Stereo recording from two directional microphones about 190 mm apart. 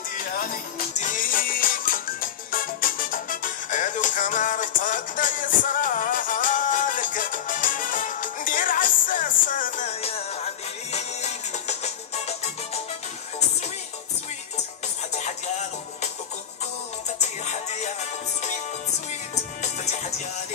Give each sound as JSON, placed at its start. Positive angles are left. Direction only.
{"t": 0.2, "sound": "music", "side_deg": 50}
{"t": 15.1, "sound": "music", "side_deg": 40}
{"t": 17.2, "sound": "music", "side_deg": 35}
{"t": 19.6, "sound": "music", "side_deg": 35}